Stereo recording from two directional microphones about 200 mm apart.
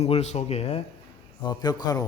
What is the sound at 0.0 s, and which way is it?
Speech, 35° left (ahead or behind).